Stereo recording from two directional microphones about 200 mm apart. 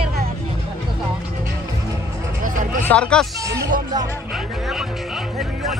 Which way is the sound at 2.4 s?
40° right (ahead or behind).